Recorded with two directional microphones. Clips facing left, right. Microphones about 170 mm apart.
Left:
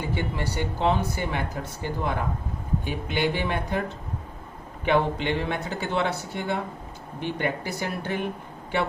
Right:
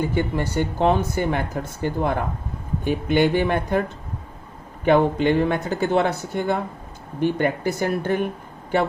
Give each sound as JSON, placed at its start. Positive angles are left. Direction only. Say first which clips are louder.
{"t": 0.1, "sound": "speech", "louder": "right 6 dB", "side_deg": -45}
{"t": 4.9, "sound": "speech", "louder": "right 6 dB", "side_deg": -45}